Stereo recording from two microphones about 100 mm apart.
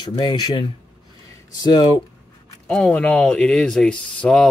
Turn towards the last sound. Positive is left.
turn(degrees=10)  # may be behind; listen again after turning